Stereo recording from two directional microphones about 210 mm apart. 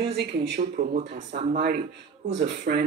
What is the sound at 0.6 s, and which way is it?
Speech, 35° right (ahead or behind).